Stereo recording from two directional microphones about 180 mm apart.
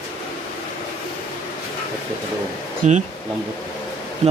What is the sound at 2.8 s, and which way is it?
Speech, 40° right (ahead or behind).